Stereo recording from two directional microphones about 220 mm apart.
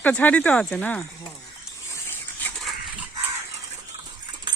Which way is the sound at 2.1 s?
5° left (ahead or behind).